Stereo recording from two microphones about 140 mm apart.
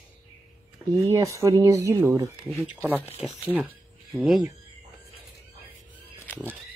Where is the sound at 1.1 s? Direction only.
20° right (ahead or behind).